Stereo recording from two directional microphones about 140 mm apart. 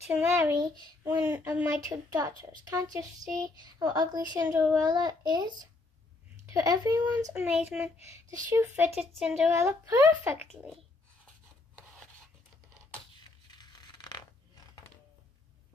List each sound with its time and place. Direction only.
0.1 s a child's voice: 15° right (ahead or behind)
7.3 s a child's voice: 10° right (ahead or behind)
8.5 s a woman's voice: 20° right (ahead or behind)
9.2 s a woman's voice: 5° right (ahead or behind)
9.5 s a woman's voice: 20° right (ahead or behind)
13.5 s a sound: 30° left (ahead or behind)